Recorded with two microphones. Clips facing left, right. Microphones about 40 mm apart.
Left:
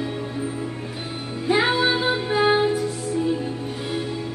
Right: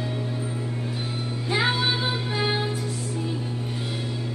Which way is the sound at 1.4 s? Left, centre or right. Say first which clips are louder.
Left 5 dB; centre.